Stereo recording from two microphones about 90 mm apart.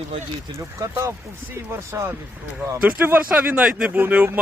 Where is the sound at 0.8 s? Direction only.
35° right (ahead or behind).